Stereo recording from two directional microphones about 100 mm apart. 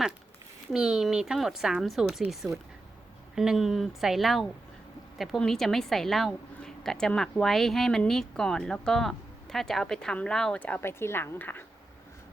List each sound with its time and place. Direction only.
0.7 s a woman's voice: 5° right (ahead or behind)
3.3 s a woman's voice: 5° right (ahead or behind)
10.6 s speech: 20° left (ahead or behind)